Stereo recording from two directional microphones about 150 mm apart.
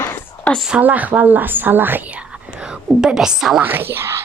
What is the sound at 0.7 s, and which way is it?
Speech, 10° right (ahead or behind).